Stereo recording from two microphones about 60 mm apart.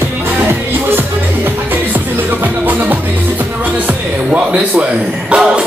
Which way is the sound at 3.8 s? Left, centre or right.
Right.